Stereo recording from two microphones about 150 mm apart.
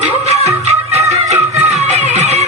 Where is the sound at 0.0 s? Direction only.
45° right (ahead or behind).